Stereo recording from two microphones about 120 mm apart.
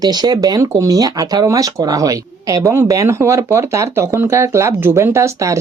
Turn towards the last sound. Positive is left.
turn(degrees=-25)  # may be behind; listen again after turning